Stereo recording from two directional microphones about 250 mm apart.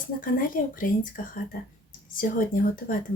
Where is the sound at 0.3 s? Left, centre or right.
Left.